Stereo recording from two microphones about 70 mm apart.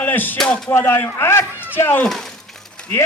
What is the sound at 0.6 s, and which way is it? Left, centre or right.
Speech, left.